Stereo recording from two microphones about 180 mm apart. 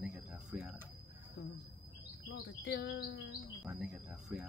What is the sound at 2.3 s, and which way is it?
Chirp, 65° left (ahead or behind).